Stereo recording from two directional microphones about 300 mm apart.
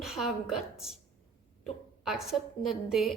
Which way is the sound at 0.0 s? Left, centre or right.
Centre.